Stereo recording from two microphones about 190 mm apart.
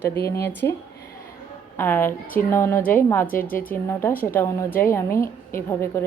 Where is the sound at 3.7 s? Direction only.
10° left (ahead or behind).